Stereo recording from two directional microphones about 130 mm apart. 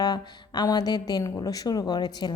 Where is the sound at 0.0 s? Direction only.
30° left (ahead or behind).